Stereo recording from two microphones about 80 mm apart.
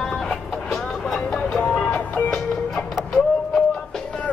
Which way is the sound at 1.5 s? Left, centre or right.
Centre.